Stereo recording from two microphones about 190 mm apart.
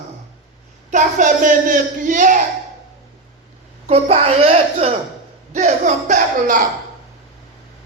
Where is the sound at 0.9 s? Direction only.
45° right (ahead or behind).